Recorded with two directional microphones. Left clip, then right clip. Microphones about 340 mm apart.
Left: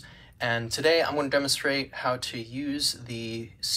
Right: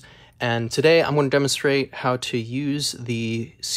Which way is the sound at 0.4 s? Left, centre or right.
Centre.